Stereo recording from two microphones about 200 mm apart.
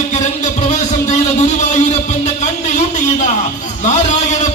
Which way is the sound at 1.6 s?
35° left (ahead or behind).